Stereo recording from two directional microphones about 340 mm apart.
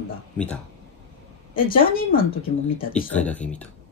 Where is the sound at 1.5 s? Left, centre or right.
Left.